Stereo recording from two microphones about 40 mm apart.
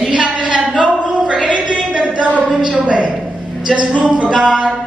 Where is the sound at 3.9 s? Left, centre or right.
Right.